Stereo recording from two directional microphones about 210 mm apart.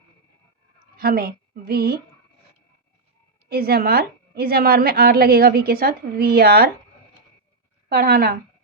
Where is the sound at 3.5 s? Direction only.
45° right (ahead or behind).